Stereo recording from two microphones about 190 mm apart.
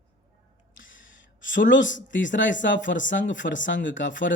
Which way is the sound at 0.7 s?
90° left.